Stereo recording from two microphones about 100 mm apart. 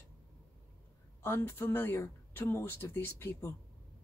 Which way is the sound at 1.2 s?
25° left (ahead or behind).